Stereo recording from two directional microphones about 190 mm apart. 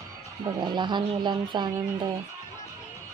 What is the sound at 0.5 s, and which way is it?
Speech, 25° right (ahead or behind).